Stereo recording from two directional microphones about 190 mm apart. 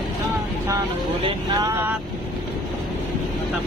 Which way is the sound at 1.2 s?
20° right (ahead or behind).